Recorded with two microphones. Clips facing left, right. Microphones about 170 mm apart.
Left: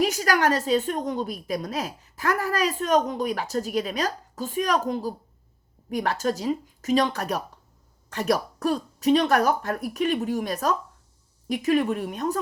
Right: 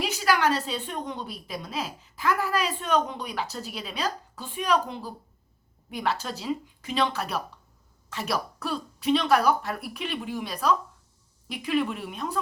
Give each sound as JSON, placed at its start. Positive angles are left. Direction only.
{"t": 0.0, "sound": "a woman's voice", "side_deg": 45}